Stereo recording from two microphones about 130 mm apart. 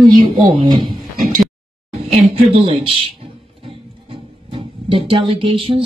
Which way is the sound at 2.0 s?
50° right (ahead or behind).